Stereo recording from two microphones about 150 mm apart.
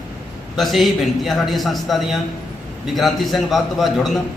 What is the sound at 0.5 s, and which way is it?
A man's voice, centre (ahead or behind).